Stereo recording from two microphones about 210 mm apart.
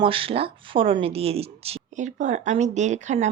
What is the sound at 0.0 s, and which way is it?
Speech, 25° right (ahead or behind).